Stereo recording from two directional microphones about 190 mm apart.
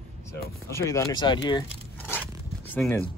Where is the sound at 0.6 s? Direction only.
15° left (ahead or behind).